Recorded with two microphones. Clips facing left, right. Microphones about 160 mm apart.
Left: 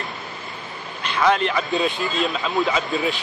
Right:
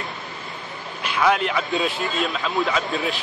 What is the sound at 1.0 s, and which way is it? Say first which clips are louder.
A man's voice: left 1 dB; 5° right (ahead or behind).